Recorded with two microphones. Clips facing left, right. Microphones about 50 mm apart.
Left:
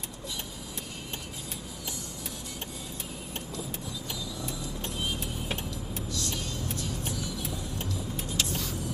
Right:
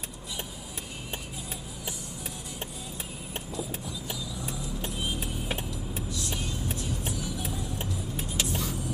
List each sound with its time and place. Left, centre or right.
4.8 s vehicle: centre